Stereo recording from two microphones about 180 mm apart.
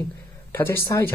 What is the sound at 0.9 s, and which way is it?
Speech, 15° left (ahead or behind).